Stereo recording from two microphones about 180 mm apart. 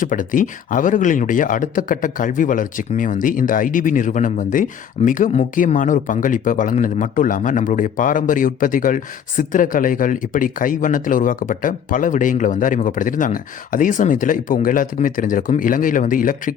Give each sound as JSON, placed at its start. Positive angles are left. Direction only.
{"t": 0.0, "sound": "speech", "side_deg": 45}